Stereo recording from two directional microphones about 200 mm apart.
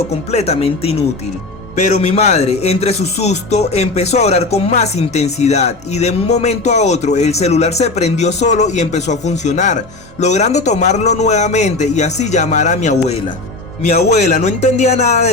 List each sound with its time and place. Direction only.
0.3 s speech: 30° left (ahead or behind)